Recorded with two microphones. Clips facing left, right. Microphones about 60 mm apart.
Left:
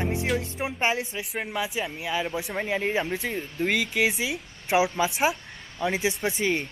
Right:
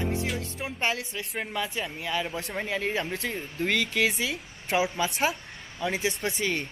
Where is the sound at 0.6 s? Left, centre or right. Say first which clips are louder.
Left 3 dB; left.